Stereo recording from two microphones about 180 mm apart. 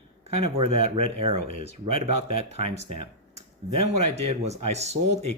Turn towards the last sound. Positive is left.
turn(degrees=-35)  # may be behind; listen again after turning